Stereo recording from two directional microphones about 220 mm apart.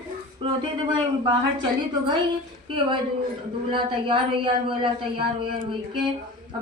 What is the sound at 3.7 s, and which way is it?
Speech, 20° right (ahead or behind).